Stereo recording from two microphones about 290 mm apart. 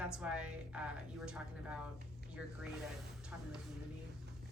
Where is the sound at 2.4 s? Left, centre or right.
Centre.